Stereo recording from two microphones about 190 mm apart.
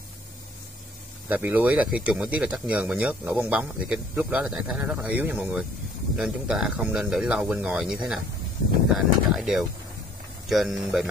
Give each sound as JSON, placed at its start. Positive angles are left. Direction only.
{"t": 1.3, "sound": "speech", "side_deg": -10}